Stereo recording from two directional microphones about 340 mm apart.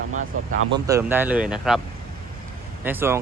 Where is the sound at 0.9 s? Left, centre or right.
Centre.